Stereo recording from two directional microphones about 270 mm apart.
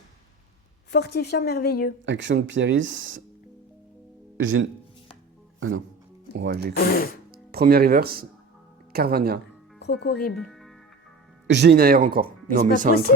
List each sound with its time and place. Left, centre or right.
0.9 s a woman's voice: left
2.0 s speech: right
4.4 s speech: right
6.3 s speech: right
6.7 s a woman's voice: left
7.3 s speech: right
9.7 s speech: left
10.3 s music: centre
11.4 s speech: right